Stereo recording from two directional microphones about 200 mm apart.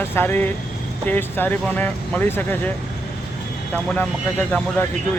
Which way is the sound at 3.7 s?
5° left (ahead or behind).